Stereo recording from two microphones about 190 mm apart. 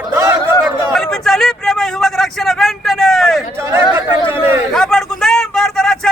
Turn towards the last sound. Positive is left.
turn(degrees=5)  # may be behind; listen again after turning